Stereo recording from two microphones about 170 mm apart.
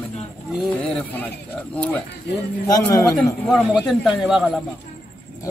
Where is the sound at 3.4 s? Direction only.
Centre (ahead or behind).